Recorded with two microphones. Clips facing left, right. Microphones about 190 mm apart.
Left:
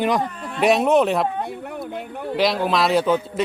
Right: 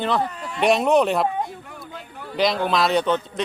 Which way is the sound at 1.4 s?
60° left (ahead or behind).